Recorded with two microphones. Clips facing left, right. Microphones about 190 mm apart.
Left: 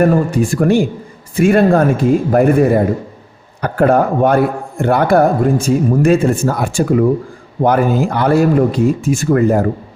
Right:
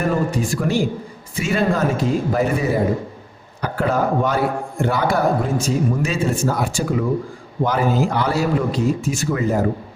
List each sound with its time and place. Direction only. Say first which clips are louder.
0.0 s a man's voice: left 7 dB; 55° left (ahead or behind)